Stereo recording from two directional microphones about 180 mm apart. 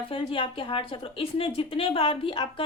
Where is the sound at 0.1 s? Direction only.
30° left (ahead or behind).